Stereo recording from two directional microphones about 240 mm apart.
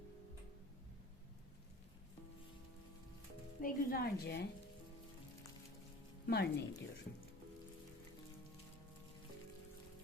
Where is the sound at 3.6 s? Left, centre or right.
Left.